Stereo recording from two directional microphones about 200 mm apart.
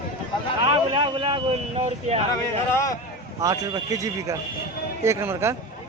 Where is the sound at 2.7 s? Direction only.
15° left (ahead or behind).